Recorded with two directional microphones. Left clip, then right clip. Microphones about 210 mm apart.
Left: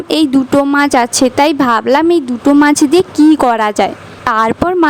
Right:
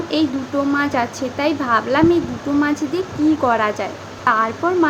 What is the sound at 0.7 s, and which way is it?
A woman's voice, 55° left (ahead or behind).